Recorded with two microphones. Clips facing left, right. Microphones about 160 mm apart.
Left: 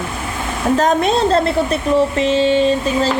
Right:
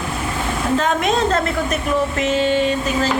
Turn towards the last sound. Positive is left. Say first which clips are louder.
# left 4 dB
turn(degrees=30)  # may be behind; listen again after turning